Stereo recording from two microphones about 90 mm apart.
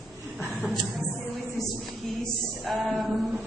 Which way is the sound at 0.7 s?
Centre (ahead or behind).